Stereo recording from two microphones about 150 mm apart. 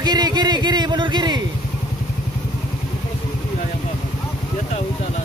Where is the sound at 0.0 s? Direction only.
25° right (ahead or behind).